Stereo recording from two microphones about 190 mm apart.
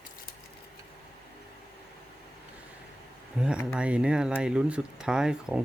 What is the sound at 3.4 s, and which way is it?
Speech, 5° right (ahead or behind).